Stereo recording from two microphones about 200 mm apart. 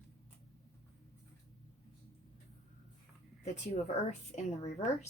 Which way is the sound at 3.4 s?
35° left (ahead or behind).